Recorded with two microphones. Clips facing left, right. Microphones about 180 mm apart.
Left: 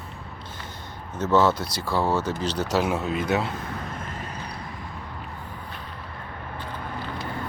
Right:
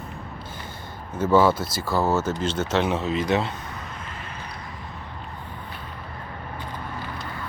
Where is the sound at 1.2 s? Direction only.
10° right (ahead or behind).